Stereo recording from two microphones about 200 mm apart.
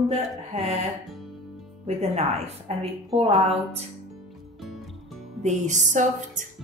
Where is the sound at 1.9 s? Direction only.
30° right (ahead or behind).